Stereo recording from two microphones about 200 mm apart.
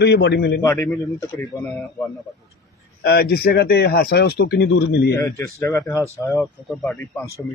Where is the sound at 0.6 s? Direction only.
10° left (ahead or behind).